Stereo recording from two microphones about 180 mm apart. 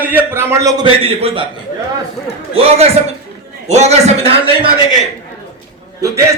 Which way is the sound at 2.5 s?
35° right (ahead or behind).